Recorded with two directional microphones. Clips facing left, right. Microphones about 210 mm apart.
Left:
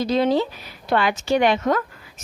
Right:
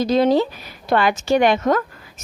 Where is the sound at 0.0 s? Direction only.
45° right (ahead or behind).